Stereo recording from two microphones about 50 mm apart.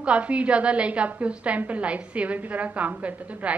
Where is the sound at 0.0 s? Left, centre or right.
Right.